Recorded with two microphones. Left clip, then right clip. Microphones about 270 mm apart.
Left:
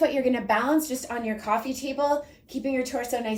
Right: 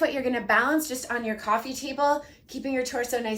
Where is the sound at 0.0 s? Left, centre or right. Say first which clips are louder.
Left 2 dB; centre.